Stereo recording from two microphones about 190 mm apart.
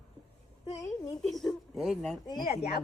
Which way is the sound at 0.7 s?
20° left (ahead or behind).